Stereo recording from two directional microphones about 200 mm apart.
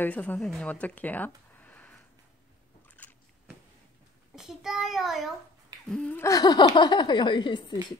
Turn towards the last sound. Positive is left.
turn(degrees=20)  # may be behind; listen again after turning